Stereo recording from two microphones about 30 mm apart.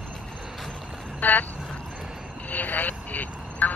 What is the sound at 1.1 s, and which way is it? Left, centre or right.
Speech, left.